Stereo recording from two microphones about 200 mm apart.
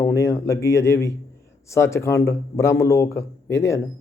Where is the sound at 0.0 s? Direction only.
15° left (ahead or behind).